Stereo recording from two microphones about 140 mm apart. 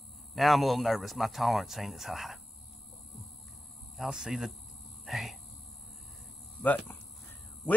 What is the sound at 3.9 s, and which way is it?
Speech, 5° right (ahead or behind).